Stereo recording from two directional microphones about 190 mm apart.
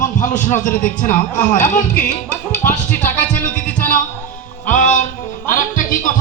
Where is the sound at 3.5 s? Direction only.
5° left (ahead or behind).